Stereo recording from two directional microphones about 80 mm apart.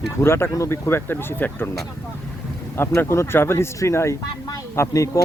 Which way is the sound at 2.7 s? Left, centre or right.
Left.